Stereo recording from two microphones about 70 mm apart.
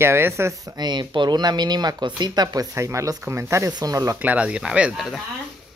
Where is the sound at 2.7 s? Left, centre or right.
Right.